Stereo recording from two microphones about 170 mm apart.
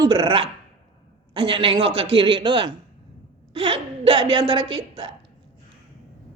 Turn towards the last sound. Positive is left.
turn(degrees=-30)  # may be behind; listen again after turning